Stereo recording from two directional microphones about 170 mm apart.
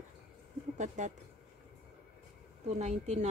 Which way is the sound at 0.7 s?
45° right (ahead or behind).